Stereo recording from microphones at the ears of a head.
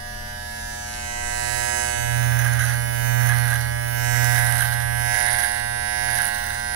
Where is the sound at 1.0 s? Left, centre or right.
Right.